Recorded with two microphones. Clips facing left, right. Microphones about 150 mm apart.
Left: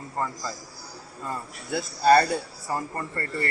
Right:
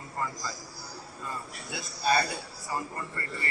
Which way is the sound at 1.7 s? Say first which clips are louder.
Left 9 dB; 60° left (ahead or behind).